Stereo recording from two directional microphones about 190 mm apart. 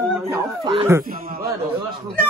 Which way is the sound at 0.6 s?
25° right (ahead or behind).